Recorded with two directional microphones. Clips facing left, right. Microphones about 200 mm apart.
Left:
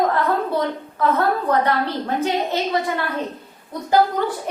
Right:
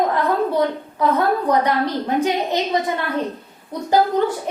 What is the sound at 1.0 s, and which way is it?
A woman's voice, 15° right (ahead or behind).